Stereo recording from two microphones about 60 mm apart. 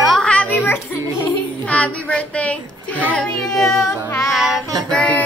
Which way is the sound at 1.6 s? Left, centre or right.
Left.